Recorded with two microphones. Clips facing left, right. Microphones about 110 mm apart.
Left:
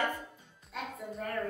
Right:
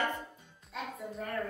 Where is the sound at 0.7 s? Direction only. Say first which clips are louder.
Even; centre (ahead or behind).